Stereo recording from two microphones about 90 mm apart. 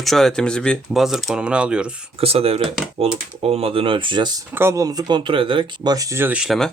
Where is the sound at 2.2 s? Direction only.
90° right.